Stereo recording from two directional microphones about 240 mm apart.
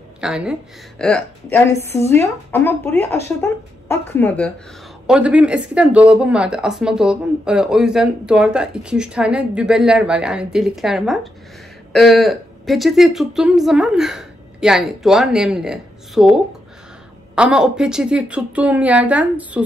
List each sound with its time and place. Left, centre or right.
0.2 s a woman's voice: centre
5.0 s a woman's voice: centre
17.4 s a woman's voice: centre